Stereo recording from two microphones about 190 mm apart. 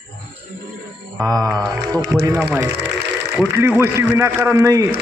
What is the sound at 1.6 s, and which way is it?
Music, 20° right (ahead or behind).